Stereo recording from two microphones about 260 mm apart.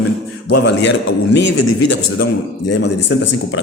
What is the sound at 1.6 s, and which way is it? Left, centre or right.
Speech, left.